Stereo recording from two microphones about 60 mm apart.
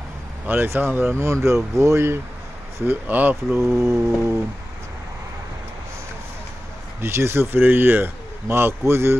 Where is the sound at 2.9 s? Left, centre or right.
Right.